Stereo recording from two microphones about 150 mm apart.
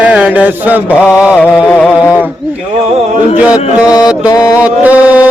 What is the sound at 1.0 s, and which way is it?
Mantra, 5° right (ahead or behind).